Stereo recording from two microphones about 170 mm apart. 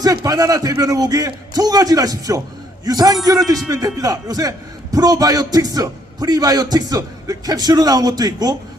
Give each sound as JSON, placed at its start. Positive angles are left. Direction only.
{"t": 0.0, "sound": "a man's voice", "side_deg": -20}